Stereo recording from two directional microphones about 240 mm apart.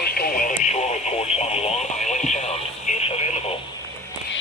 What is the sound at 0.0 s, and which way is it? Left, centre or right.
Radio, left.